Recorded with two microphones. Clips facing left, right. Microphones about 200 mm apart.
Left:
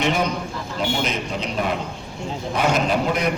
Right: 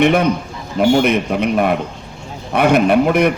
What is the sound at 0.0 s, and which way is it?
A man's voice, 60° right (ahead or behind).